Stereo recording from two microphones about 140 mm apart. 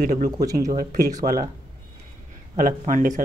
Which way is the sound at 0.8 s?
65° right (ahead or behind).